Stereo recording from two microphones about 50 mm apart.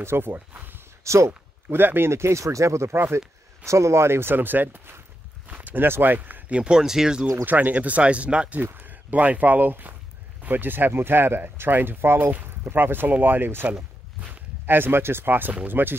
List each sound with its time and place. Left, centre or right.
0.0 s speech: right
0.3 s a sound: right
1.0 s speech: right
1.7 s speech: right
6.5 s speech: centre
7.4 s speech: right
8.7 s speech: right
14.7 s speech: right